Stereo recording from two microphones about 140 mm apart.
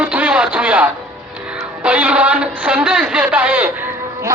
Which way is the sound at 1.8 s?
10° right (ahead or behind).